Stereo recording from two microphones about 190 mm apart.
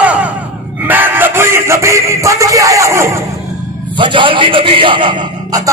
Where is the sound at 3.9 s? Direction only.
25° right (ahead or behind).